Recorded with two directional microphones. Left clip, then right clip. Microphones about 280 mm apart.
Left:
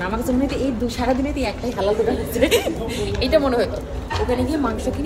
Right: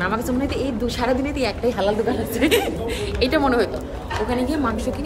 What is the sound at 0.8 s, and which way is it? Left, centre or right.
A woman's voice, centre.